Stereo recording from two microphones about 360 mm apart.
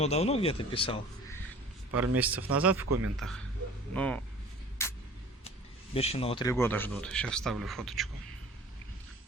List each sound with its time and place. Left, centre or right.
0.0 s speech: centre
2.0 s speech: centre
2.8 s a man's voice: right
3.2 s speech: centre
4.8 s a sound: centre
5.9 s speech: centre